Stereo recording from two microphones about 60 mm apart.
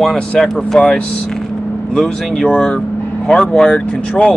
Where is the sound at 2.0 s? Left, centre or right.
Centre.